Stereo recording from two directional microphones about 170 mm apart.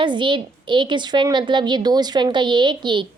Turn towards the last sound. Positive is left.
turn(degrees=-25)  # may be behind; listen again after turning